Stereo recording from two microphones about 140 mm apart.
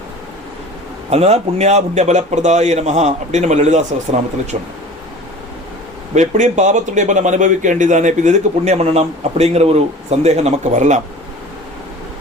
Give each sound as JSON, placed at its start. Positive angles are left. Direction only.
{"t": 1.1, "sound": "a man's voice", "side_deg": -50}
{"t": 6.1, "sound": "a man's voice", "side_deg": -60}